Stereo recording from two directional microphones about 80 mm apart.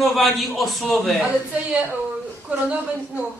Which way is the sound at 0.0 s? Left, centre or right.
Centre.